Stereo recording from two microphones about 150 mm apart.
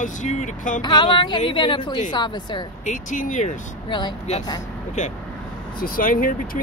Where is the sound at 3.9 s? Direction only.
30° left (ahead or behind).